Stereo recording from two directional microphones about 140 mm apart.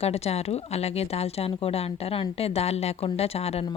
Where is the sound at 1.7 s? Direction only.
45° left (ahead or behind).